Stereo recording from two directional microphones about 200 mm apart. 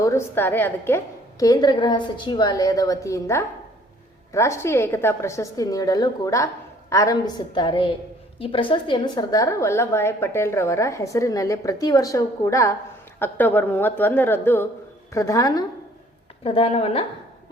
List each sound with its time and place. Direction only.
0.0 s a woman's voice: 15° left (ahead or behind)
16.4 s a woman's voice: 30° left (ahead or behind)